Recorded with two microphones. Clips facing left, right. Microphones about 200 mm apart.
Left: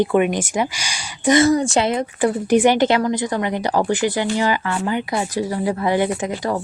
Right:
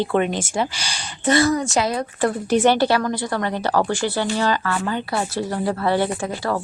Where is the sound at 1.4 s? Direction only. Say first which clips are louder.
Left 3 dB; 30° left (ahead or behind).